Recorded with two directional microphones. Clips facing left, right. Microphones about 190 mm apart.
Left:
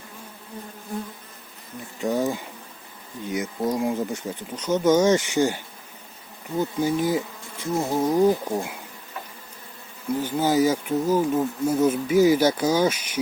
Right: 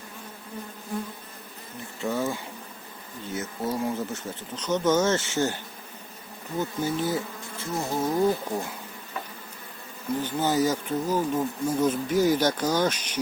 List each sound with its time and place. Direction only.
2.0 s speech: 15° left (ahead or behind)
10.1 s speech: 10° left (ahead or behind)